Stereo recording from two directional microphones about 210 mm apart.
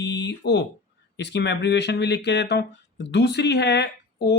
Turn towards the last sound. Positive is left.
turn(degrees=55)  # may be behind; listen again after turning